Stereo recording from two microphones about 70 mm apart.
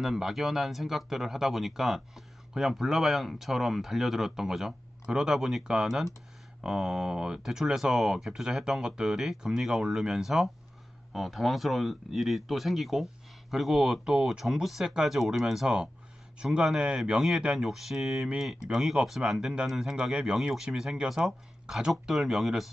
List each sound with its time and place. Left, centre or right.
0.0 s speech: centre